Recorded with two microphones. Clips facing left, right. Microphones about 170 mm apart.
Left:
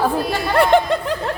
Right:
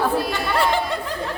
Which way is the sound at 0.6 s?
60° left (ahead or behind).